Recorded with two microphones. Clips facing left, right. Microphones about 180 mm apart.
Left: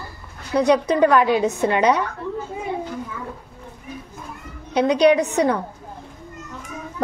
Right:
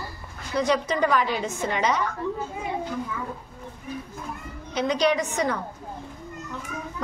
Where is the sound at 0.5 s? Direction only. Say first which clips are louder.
Left 6 dB; 65° left (ahead or behind).